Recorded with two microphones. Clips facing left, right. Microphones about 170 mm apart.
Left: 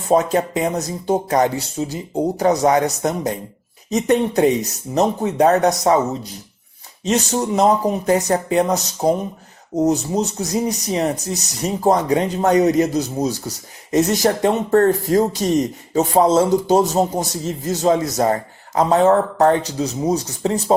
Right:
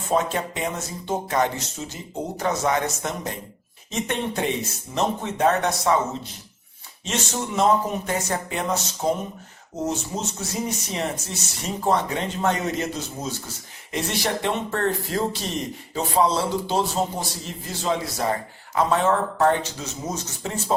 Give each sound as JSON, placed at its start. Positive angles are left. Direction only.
{"t": 0.3, "sound": "speech", "side_deg": 40}
{"t": 7.0, "sound": "a man's voice", "side_deg": 40}